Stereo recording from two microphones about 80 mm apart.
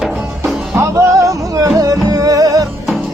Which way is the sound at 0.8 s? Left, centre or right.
Right.